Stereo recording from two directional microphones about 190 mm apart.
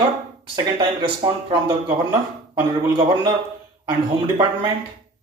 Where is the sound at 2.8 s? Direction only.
25° right (ahead or behind).